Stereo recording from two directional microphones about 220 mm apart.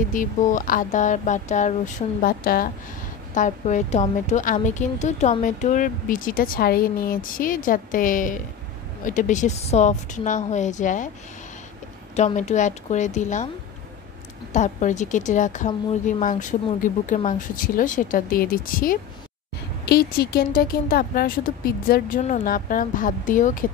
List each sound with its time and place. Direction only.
0.1 s a woman's voice: 35° left (ahead or behind)
12.2 s a woman's voice: 30° left (ahead or behind)
14.5 s a woman's voice: 35° left (ahead or behind)